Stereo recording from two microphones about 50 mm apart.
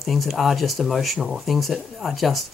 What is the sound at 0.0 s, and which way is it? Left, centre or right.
Speech, centre.